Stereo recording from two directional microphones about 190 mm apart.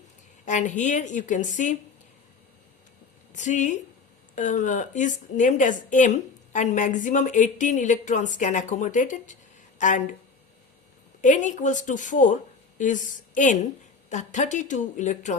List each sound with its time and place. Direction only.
0.4 s a woman's voice: 40° left (ahead or behind)
3.3 s a woman's voice: 40° left (ahead or behind)
11.2 s a woman's voice: 40° left (ahead or behind)